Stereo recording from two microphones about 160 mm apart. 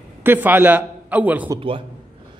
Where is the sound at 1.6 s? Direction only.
35° right (ahead or behind).